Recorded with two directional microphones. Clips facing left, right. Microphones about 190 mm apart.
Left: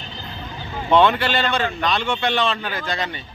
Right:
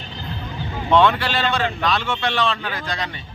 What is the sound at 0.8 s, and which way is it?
A man's voice, centre (ahead or behind).